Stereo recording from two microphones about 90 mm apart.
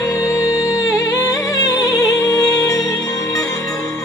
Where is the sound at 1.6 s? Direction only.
45° left (ahead or behind).